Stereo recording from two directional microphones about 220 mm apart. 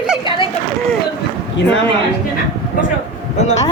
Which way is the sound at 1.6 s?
50° left (ahead or behind).